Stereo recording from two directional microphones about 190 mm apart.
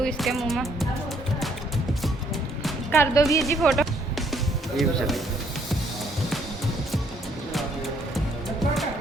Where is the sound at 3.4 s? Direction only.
Centre (ahead or behind).